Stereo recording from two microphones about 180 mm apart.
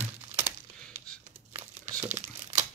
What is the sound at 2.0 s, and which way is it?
Crumpling, 40° right (ahead or behind).